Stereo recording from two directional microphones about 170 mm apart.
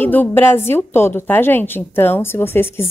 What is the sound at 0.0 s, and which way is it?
A woman's voice, 10° left (ahead or behind).